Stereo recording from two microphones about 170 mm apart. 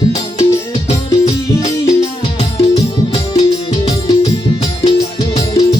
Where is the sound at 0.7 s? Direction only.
40° left (ahead or behind).